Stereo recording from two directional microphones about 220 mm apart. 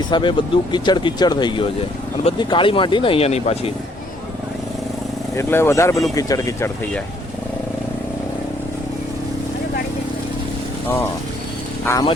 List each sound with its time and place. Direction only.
0.1 s speech: 20° left (ahead or behind)
5.4 s speech: 10° left (ahead or behind)
11.9 s speech: 15° left (ahead or behind)